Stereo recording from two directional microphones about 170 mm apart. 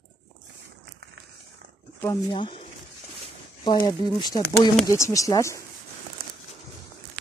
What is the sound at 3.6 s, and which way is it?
Speech, 25° left (ahead or behind).